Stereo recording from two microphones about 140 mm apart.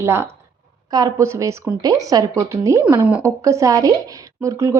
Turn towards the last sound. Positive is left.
turn(degrees=-20)  # may be behind; listen again after turning